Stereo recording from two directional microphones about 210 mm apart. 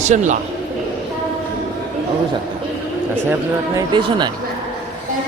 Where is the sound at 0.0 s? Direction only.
35° right (ahead or behind).